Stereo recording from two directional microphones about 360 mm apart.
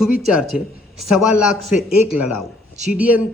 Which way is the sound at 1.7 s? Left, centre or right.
Left.